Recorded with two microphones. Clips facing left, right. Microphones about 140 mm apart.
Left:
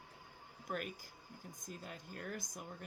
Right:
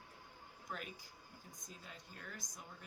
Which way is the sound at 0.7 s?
55° left (ahead or behind).